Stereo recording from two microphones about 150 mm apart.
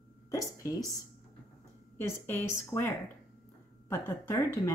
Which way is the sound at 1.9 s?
15° left (ahead or behind).